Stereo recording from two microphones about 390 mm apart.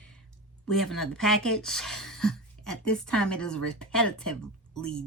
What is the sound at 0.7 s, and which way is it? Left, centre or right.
Speech, centre.